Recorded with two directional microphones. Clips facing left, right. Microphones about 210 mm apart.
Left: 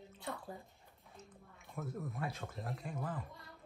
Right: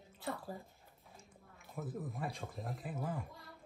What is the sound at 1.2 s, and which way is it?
Speech, 5° right (ahead or behind).